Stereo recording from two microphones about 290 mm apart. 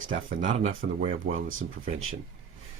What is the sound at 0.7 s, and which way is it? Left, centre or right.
Speech, right.